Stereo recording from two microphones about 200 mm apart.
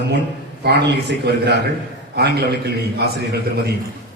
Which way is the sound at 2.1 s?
55° right (ahead or behind).